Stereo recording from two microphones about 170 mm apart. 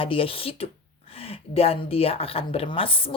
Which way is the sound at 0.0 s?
30° left (ahead or behind).